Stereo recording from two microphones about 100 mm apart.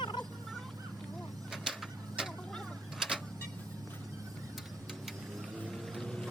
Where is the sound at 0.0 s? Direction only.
50° left (ahead or behind).